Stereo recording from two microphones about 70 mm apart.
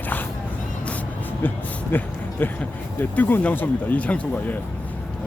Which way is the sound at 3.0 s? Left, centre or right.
Left.